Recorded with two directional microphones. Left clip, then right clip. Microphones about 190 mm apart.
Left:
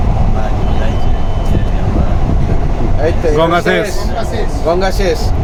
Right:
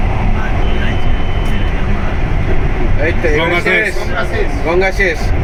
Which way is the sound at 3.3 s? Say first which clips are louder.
Left 1 dB; 45° left (ahead or behind).